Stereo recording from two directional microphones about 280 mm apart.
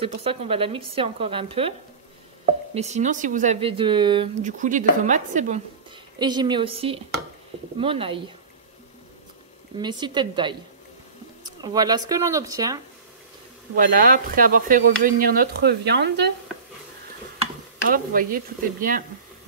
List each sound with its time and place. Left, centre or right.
0.0 s speech: right
6.1 s speech: centre
9.8 s speech: centre
11.6 s speech: centre
13.7 s speech: right
17.8 s speech: right